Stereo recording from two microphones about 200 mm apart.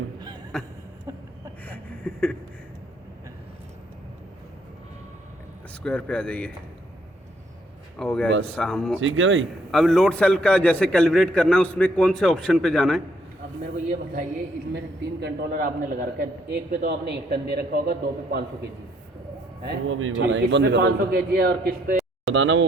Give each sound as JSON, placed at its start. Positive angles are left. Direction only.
{"t": 0.5, "sound": "a man's voice", "side_deg": 5}
{"t": 1.6, "sound": "a sound", "side_deg": 5}
{"t": 5.8, "sound": "a man's voice", "side_deg": 5}
{"t": 7.9, "sound": "a man's voice", "side_deg": 5}
{"t": 9.0, "sound": "speech", "side_deg": -75}
{"t": 9.7, "sound": "a man's voice", "side_deg": 0}
{"t": 14.7, "sound": "a man's voice", "side_deg": -55}
{"t": 19.6, "sound": "a man's voice", "side_deg": -75}
{"t": 22.3, "sound": "speech", "side_deg": -75}